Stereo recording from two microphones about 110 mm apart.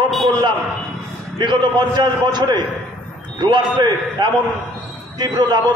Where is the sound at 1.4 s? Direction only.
45° right (ahead or behind).